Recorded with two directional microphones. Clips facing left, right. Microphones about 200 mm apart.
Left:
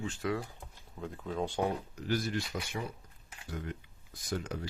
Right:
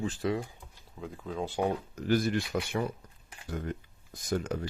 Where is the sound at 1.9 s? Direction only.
55° right (ahead or behind).